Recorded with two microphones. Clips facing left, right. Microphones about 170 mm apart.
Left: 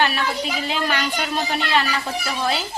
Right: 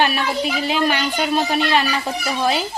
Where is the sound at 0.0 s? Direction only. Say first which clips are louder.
Right 3 dB; 15° right (ahead or behind).